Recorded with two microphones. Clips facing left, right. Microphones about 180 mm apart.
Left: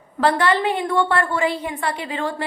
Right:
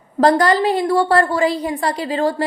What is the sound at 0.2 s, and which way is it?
A woman's voice, 40° right (ahead or behind).